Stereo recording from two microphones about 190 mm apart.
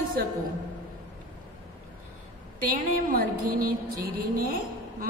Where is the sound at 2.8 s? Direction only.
45° right (ahead or behind).